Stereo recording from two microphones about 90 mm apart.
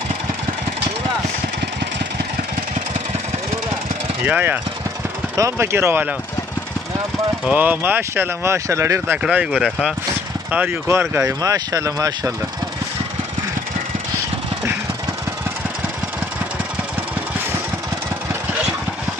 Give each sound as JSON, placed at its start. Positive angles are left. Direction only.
{"t": 4.2, "sound": "speech", "side_deg": -20}
{"t": 5.3, "sound": "speech", "side_deg": -30}
{"t": 7.4, "sound": "speech", "side_deg": -20}
{"t": 8.6, "sound": "speech", "side_deg": -35}
{"t": 9.2, "sound": "speech", "side_deg": -10}
{"t": 10.9, "sound": "speech", "side_deg": -30}
{"t": 11.4, "sound": "speech", "side_deg": -40}